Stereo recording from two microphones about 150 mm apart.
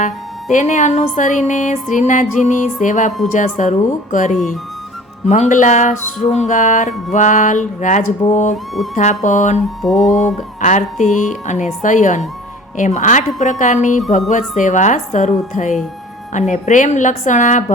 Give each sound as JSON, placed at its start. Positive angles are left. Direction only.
{"t": 0.0, "sound": "music", "side_deg": 55}
{"t": 9.0, "sound": "speech", "side_deg": 55}
{"t": 9.8, "sound": "music", "side_deg": 0}
{"t": 10.1, "sound": "music", "side_deg": 55}